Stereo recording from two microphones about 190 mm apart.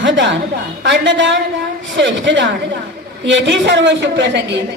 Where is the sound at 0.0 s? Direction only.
80° right.